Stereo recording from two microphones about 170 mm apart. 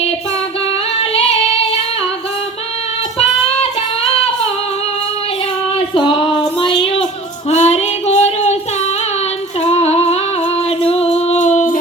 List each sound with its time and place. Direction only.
1.1 s female singing: 35° left (ahead or behind)
5.9 s a sound: 30° left (ahead or behind)
7.5 s child singing: 40° left (ahead or behind)
9.6 s female singing: 40° left (ahead or behind)
10.8 s music: 35° left (ahead or behind)